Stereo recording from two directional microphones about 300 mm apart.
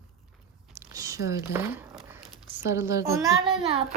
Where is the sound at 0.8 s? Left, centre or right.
Centre.